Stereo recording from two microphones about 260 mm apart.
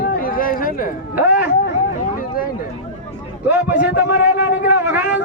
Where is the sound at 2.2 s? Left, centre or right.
Left.